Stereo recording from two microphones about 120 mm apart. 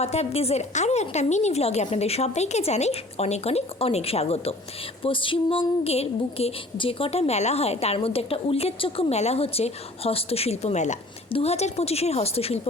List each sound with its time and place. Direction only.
0.0 s a woman's voice: 60° left (ahead or behind)
5.0 s a sound: 45° left (ahead or behind)
6.7 s a woman's voice: 50° left (ahead or behind); by 10.9 s 70° left (ahead or behind)
11.3 s a woman's voice: 55° left (ahead or behind)